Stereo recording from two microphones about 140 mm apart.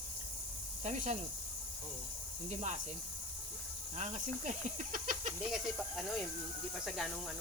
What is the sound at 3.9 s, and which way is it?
Speech, 60° right (ahead or behind).